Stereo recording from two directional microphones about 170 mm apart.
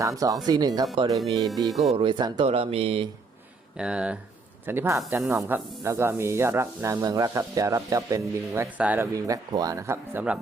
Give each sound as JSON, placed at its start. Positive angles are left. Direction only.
{"t": 0.0, "sound": "speech", "side_deg": -20}
{"t": 1.6, "sound": "speech", "side_deg": 0}
{"t": 2.0, "sound": "speech", "side_deg": -30}
{"t": 3.8, "sound": "speech", "side_deg": -5}
{"t": 9.1, "sound": "speech", "side_deg": -20}